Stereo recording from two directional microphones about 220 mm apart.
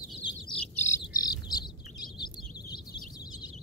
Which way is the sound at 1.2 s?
15° left (ahead or behind).